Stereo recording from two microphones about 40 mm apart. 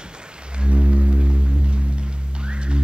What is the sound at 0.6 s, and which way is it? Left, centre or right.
Music, right.